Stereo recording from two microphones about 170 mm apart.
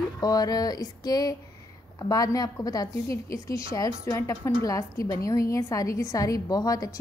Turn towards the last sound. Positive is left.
turn(degrees=20)  # may be behind; listen again after turning